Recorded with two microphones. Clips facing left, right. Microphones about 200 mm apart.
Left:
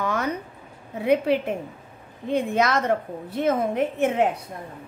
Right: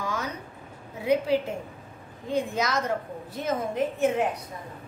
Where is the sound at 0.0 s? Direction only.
60° left (ahead or behind).